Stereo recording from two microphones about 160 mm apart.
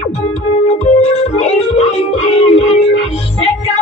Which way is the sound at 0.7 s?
45° left (ahead or behind).